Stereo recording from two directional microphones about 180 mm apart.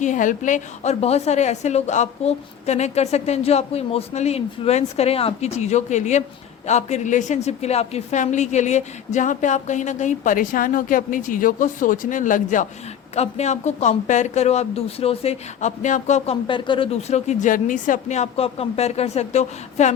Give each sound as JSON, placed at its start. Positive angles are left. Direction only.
{"t": 0.0, "sound": "a woman's voice", "side_deg": 45}